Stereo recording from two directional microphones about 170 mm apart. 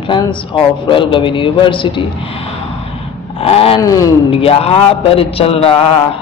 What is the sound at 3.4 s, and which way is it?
Speech, 35° left (ahead or behind).